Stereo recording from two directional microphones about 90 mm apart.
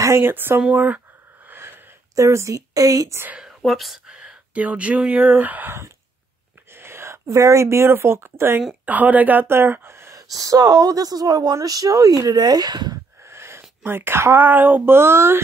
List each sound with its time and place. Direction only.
0.0 s speech: 25° right (ahead or behind)
0.6 s a sound: 15° right (ahead or behind)
2.1 s a woman's voice: 35° right (ahead or behind)
3.3 s speech: centre (ahead or behind); by 10.2 s 30° right (ahead or behind)
10.3 s speech: 40° right (ahead or behind)
13.2 s speech: 30° right (ahead or behind)